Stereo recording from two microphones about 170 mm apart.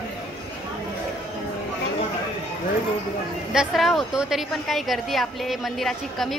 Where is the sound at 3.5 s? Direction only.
Centre (ahead or behind).